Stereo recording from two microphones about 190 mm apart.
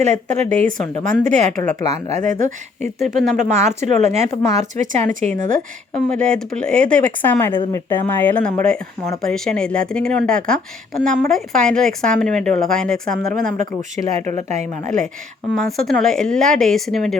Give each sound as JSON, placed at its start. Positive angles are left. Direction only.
{"t": 0.0, "sound": "speech", "side_deg": -40}
{"t": 6.1, "sound": "speech", "side_deg": 5}
{"t": 13.1, "sound": "speech", "side_deg": -45}
{"t": 15.5, "sound": "speech", "side_deg": 0}